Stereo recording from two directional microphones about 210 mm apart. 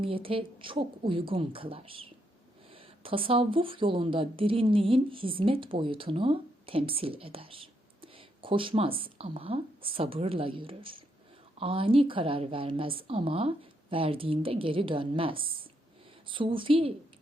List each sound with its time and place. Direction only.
0.0 s a woman's voice: 25° right (ahead or behind)